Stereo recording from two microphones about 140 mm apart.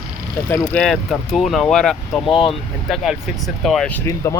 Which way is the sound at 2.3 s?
40° left (ahead or behind).